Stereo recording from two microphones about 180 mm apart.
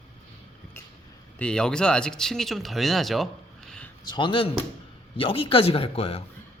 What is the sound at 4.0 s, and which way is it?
Speech, 25° left (ahead or behind).